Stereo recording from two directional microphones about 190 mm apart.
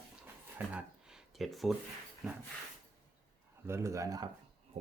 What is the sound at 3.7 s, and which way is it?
Speech, 15° right (ahead or behind).